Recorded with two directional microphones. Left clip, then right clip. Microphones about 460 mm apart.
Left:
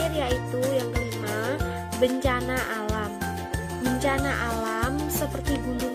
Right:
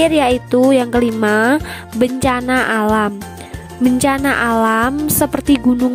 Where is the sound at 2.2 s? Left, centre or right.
Right.